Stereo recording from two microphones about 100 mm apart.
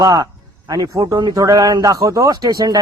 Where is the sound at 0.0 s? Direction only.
40° right (ahead or behind).